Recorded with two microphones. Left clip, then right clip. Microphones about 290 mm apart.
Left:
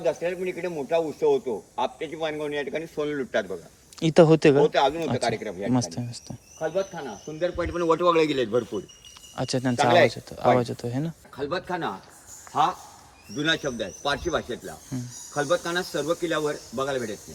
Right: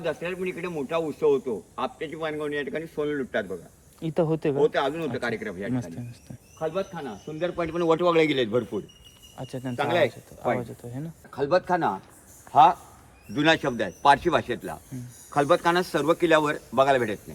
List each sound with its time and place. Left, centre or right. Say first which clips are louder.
0.0 s speech: left 3 dB; centre
6.6 s speech: left 2 dB; centre
9.3 s speech: left 8 dB; left
11.3 s speech: right 6 dB; centre
13.3 s speech: right 3 dB; right